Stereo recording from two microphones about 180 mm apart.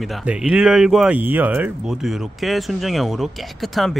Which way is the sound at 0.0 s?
5° right (ahead or behind).